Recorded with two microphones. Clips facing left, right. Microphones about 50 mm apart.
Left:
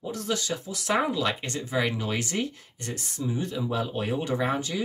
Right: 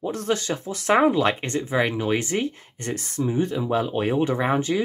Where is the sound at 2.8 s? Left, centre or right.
Right.